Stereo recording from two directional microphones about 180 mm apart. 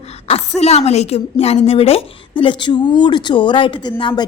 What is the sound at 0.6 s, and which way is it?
A woman's voice, 35° left (ahead or behind).